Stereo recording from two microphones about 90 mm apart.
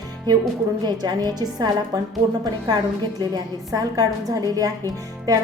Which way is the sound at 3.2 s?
45° right (ahead or behind).